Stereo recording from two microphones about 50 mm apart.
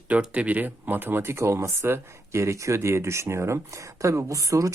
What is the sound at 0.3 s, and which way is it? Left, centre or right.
Speech, right.